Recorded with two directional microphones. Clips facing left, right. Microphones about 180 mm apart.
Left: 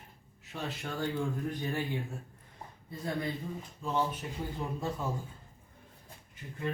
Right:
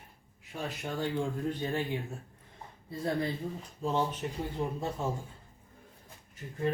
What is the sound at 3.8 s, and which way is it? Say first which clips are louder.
Speech: right 2 dB; 35° right (ahead or behind).